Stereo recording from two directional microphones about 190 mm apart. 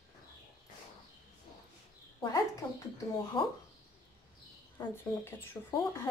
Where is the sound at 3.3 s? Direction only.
25° left (ahead or behind).